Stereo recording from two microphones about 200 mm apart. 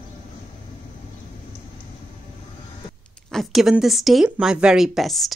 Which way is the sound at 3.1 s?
Centre (ahead or behind).